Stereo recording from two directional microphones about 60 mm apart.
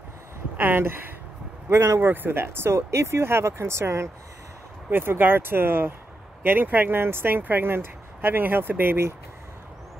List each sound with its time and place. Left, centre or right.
0.6 s speech: right
4.8 s speech: right